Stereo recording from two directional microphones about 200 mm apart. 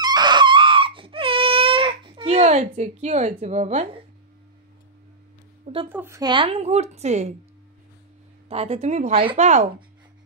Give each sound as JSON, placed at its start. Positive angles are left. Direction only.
{"t": 0.0, "sound": "whimper", "side_deg": -20}
{"t": 5.9, "sound": "speech", "side_deg": -10}
{"t": 8.5, "sound": "speech", "side_deg": -30}